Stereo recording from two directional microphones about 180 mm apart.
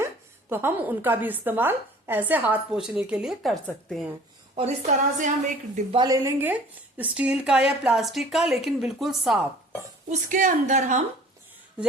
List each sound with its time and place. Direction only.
0.5 s a woman's voice: 10° right (ahead or behind)
4.5 s a woman's voice: 40° right (ahead or behind)
6.0 s speech: 20° right (ahead or behind); by 9.4 s centre (ahead or behind)
10.1 s a woman's voice: 45° right (ahead or behind)